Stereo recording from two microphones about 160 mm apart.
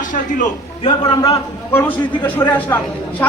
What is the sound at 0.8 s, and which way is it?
Speech, 35° left (ahead or behind).